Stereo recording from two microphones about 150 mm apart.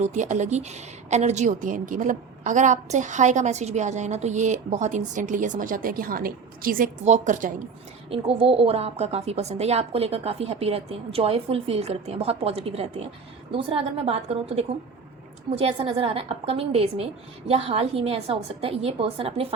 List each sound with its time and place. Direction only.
0.0 s a woman's voice: 50° right (ahead or behind); by 6.9 s 70° right (ahead or behind)
7.0 s a woman's voice: 55° right (ahead or behind)
8.1 s a woman's voice: 40° right (ahead or behind)